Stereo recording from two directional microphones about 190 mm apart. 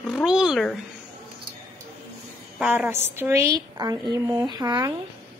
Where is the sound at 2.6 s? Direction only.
10° right (ahead or behind).